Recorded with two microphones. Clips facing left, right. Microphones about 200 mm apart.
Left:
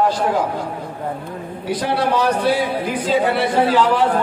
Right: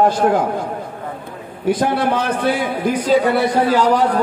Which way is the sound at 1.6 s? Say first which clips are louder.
Right 4 dB; 50° right (ahead or behind).